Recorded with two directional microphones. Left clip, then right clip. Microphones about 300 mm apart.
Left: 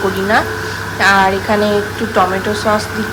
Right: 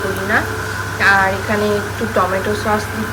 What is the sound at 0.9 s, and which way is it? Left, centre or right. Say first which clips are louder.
Speech: left 2 dB; centre.